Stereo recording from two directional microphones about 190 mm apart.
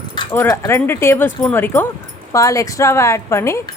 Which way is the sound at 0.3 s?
10° left (ahead or behind).